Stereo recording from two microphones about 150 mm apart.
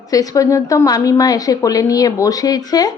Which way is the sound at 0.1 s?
25° left (ahead or behind).